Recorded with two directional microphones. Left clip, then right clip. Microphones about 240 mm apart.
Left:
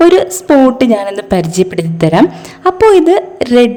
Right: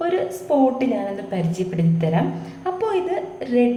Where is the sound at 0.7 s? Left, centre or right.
Left.